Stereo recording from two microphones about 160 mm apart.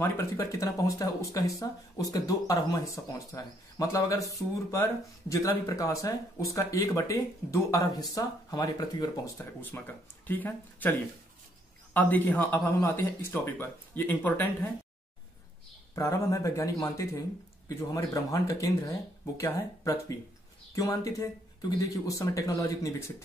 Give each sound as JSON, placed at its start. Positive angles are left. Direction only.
{"t": 0.0, "sound": "speech", "side_deg": 20}
{"t": 15.9, "sound": "speech", "side_deg": 20}